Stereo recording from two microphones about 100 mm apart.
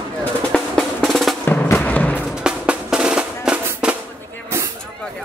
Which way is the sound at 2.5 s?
10° right (ahead or behind).